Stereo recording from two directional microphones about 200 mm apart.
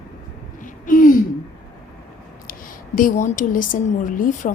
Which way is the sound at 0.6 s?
40° left (ahead or behind).